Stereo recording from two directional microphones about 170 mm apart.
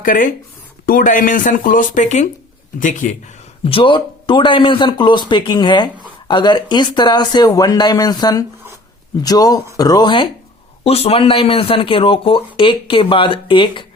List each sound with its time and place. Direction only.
0.0 s speech: 55° left (ahead or behind)
3.6 s speech: 30° left (ahead or behind)